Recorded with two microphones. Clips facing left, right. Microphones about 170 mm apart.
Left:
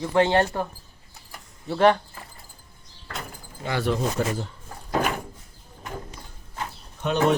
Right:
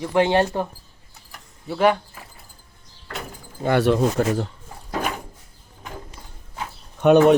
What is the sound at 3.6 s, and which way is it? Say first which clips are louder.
Speech: right 7 dB; 60° right (ahead or behind).